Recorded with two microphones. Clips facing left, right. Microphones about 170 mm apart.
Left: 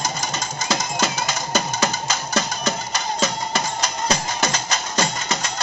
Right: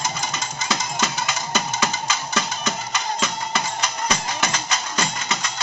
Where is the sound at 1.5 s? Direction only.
40° left (ahead or behind).